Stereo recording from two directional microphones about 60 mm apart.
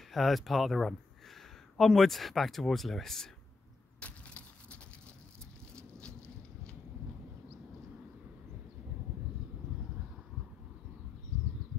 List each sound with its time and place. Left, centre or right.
0.1 s speech: centre
4.0 s crushing: left